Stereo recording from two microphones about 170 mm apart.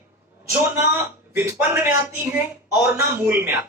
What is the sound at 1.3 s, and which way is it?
Speech, 15° right (ahead or behind).